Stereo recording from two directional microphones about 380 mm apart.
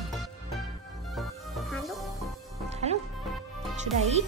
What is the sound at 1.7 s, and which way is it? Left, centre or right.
Music, centre.